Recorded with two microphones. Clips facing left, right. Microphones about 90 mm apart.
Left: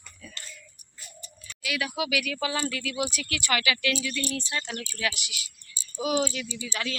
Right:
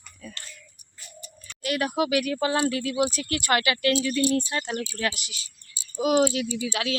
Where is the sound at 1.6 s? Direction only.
45° right (ahead or behind).